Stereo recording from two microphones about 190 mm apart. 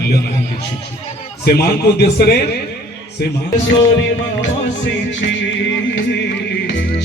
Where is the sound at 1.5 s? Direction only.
55° left (ahead or behind).